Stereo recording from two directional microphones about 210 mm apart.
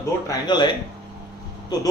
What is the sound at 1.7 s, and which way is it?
Speech, 20° left (ahead or behind).